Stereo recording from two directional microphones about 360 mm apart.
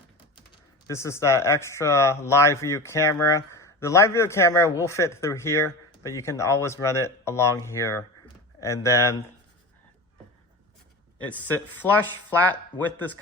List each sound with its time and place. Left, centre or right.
0.9 s speech: centre
11.2 s speech: centre